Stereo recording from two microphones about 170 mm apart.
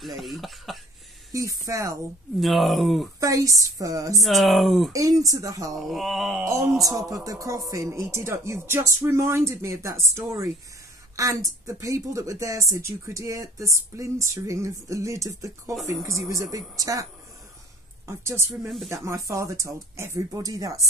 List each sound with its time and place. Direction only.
0.2 s speech: centre (ahead or behind)
1.3 s speech: 20° right (ahead or behind)
2.4 s speech: centre (ahead or behind)
3.2 s speech: 20° right (ahead or behind)
4.2 s speech: centre (ahead or behind)
4.9 s speech: 20° right (ahead or behind)
5.8 s speech: centre (ahead or behind)
6.4 s speech: 20° right (ahead or behind)